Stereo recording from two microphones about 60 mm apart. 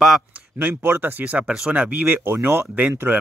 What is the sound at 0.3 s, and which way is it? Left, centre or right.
Speech, right.